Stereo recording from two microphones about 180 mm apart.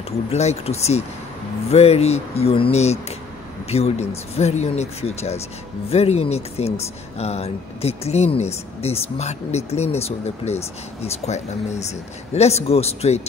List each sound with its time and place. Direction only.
0.3 s speech: 35° left (ahead or behind)